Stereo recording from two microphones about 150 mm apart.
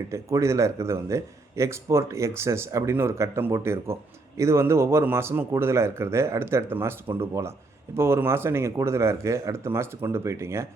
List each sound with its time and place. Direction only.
0.1 s a man's voice: 20° right (ahead or behind)